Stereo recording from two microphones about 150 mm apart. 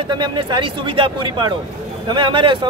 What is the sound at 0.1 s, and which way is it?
Speech, 30° right (ahead or behind).